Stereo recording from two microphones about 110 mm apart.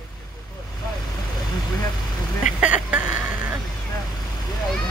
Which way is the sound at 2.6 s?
10° right (ahead or behind).